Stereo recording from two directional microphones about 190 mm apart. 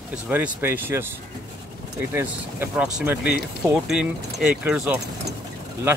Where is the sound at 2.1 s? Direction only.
10° right (ahead or behind).